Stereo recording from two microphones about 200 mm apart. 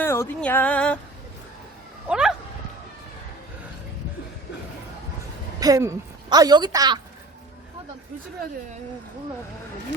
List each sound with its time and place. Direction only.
0.0 s music: 10° left (ahead or behind)
2.0 s dog: 5° right (ahead or behind)
5.5 s a woman's voice: 15° right (ahead or behind)